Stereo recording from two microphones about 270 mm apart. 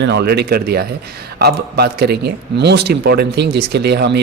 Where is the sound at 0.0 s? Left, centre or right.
Right.